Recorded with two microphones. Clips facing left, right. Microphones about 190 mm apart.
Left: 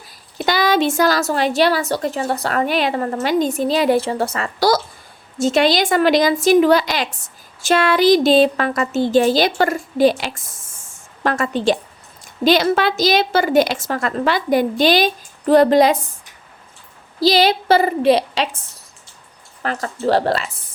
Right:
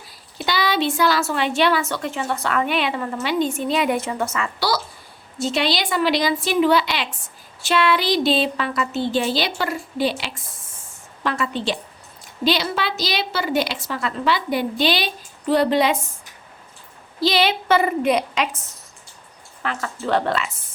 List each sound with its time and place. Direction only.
0.3 s a woman's voice: 45° left (ahead or behind)
17.2 s a woman's voice: 40° left (ahead or behind)
19.6 s a woman's voice: 40° left (ahead or behind)